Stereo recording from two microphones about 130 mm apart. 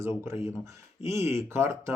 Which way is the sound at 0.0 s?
20° right (ahead or behind).